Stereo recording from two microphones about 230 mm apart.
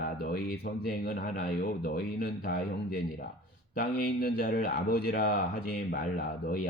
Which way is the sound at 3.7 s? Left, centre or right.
Left.